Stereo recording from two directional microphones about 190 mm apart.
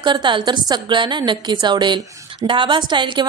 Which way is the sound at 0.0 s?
25° right (ahead or behind).